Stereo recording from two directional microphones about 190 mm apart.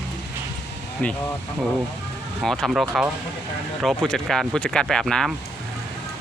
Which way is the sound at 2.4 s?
Centre (ahead or behind).